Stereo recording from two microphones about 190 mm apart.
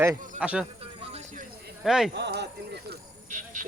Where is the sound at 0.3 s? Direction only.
5° right (ahead or behind).